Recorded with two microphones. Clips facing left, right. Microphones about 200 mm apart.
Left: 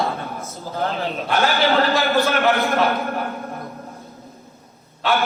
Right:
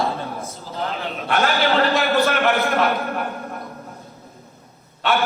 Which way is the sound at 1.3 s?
Centre (ahead or behind).